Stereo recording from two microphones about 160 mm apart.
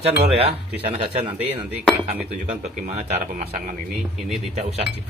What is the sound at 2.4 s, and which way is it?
Speech, 50° right (ahead or behind).